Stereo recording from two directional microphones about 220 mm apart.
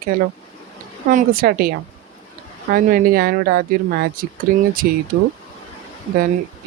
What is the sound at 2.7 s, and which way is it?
Speech, 40° right (ahead or behind).